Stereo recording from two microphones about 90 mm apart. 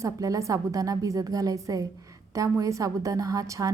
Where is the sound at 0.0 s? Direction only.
40° right (ahead or behind).